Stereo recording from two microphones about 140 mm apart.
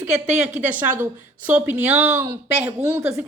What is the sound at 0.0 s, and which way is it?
Speech, 10° right (ahead or behind).